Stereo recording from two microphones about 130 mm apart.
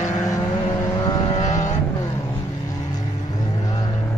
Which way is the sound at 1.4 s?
65° left (ahead or behind).